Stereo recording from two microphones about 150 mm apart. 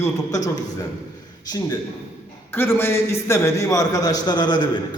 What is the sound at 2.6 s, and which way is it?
A man's voice, 15° left (ahead or behind).